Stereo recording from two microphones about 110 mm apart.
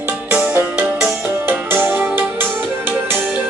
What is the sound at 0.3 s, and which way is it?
Music, 20° right (ahead or behind).